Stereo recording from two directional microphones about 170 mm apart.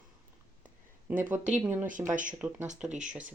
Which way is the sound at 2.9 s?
45° right (ahead or behind).